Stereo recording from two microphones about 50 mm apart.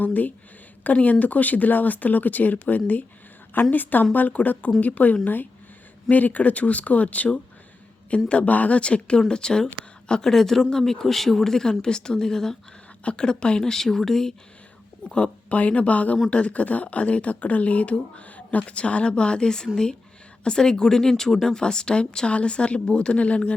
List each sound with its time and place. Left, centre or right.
0.0 s speech: left
8.3 s speech: left; by 14.3 s centre
15.1 s speech: left